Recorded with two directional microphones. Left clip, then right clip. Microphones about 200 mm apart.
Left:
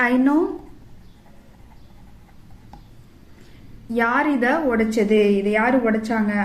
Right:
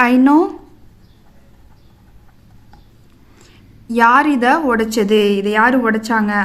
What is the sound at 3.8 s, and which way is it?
A woman's voice, 45° right (ahead or behind).